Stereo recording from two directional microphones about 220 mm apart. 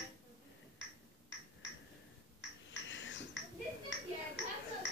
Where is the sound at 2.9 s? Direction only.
55° left (ahead or behind).